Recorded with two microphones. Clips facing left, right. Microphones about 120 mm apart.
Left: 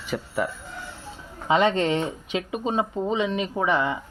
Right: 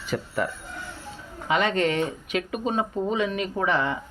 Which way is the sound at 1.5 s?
25° left (ahead or behind).